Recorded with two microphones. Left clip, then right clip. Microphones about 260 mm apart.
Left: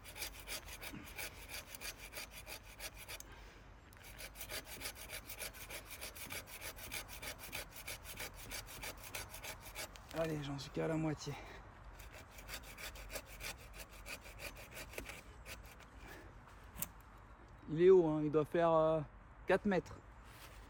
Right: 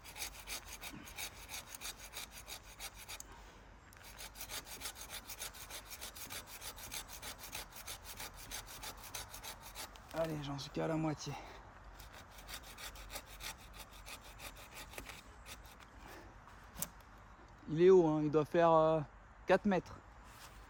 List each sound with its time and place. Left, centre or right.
0.5 s sawing: centre
4.2 s wood: centre; by 11.4 s right
12.8 s sawing: centre
17.7 s speech: right